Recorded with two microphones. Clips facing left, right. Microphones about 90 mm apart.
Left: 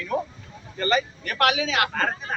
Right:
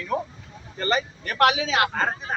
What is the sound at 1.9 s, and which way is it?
Speech, 20° right (ahead or behind).